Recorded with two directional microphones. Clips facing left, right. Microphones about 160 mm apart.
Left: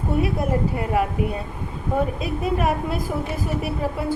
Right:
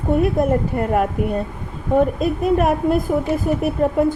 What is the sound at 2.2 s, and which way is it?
Speech, 50° right (ahead or behind).